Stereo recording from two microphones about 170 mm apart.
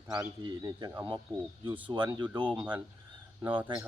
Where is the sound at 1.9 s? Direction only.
25° right (ahead or behind).